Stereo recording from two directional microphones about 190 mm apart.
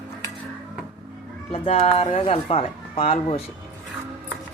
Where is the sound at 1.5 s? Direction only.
30° left (ahead or behind).